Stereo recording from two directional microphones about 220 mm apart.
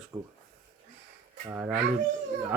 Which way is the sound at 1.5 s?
10° right (ahead or behind).